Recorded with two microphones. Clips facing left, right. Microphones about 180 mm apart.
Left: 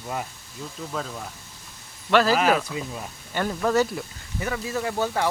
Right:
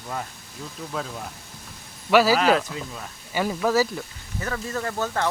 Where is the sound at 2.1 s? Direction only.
10° right (ahead or behind).